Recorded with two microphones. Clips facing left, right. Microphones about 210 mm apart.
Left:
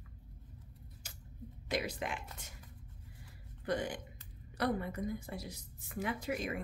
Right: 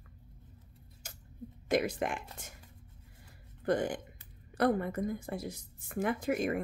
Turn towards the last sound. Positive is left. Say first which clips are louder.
# right 6 dB
turn(degrees=-50)  # may be behind; listen again after turning